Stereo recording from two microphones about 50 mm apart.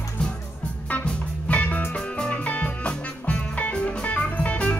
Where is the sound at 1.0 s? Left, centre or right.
Left.